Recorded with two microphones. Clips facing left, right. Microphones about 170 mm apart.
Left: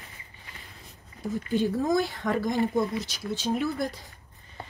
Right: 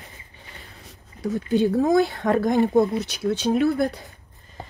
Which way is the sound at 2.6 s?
65° right (ahead or behind).